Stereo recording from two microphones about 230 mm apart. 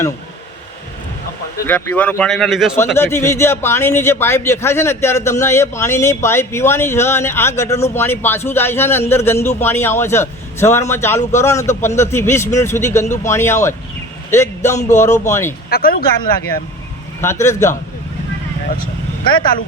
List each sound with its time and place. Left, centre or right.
1.6 s speech: centre
2.7 s a man's voice: centre
14.3 s a sound: centre
14.8 s a man's voice: centre
15.7 s speech: left
17.2 s a man's voice: centre